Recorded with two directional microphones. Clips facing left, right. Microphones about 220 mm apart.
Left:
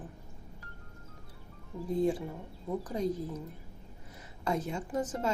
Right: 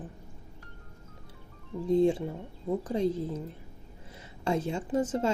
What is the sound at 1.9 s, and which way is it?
Speech, 25° right (ahead or behind).